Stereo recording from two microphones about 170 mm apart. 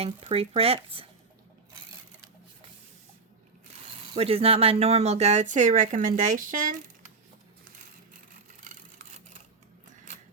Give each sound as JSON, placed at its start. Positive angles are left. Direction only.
{"t": 0.0, "sound": "speech", "side_deg": -35}
{"t": 4.1, "sound": "speech", "side_deg": -35}
{"t": 8.6, "sound": "a sound", "side_deg": -50}